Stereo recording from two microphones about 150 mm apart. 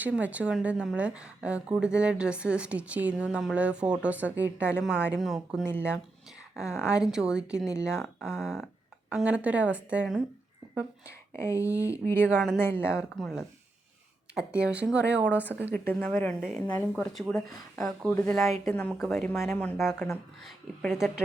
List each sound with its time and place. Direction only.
0.0 s speech: 10° right (ahead or behind)
5.6 s speech: 15° left (ahead or behind)
6.9 s speech: 5° right (ahead or behind)
11.3 s speech: 20° left (ahead or behind)
11.7 s speech: 10° right (ahead or behind)
12.0 s speech: 15° left (ahead or behind)
12.3 s speech: 5° right (ahead or behind)
12.6 s speech: 15° left (ahead or behind)
12.9 s speech: centre (ahead or behind)
15.9 s speech: 10° left (ahead or behind)